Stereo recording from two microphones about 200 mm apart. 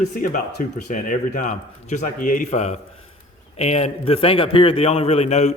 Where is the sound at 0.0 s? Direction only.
40° left (ahead or behind).